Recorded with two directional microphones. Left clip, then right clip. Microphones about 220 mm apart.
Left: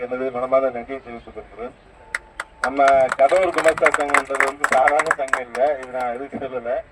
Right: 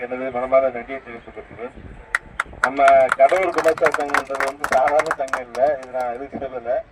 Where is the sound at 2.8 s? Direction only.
50° left (ahead or behind).